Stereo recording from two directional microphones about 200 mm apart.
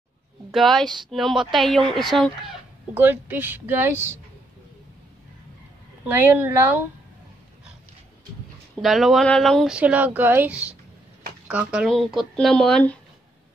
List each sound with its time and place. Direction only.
0.5 s speech: centre (ahead or behind)
2.9 s speech: 10° right (ahead or behind)
6.0 s speech: 10° right (ahead or behind)
8.8 s speech: centre (ahead or behind)